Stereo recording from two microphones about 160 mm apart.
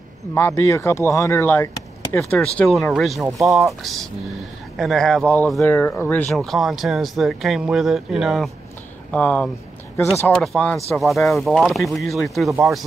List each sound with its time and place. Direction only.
0.3 s speech: 15° left (ahead or behind); by 3.3 s centre (ahead or behind)
3.3 s speech: 20° right (ahead or behind)
3.5 s speech: centre (ahead or behind)
6.3 s speech: centre (ahead or behind)
9.1 s speech: 10° left (ahead or behind)